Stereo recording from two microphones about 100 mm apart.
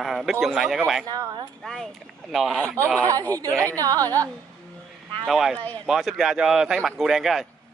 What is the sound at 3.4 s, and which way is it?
Speech, 30° right (ahead or behind).